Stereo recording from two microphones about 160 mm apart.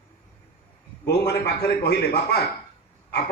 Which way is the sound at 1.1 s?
90° left.